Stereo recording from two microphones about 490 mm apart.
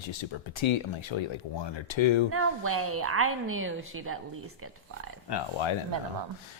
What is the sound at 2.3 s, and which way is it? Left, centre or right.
A woman's voice, right.